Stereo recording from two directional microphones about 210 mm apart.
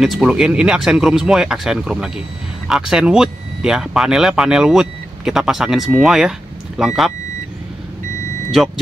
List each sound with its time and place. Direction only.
0.0 s speech: 5° right (ahead or behind)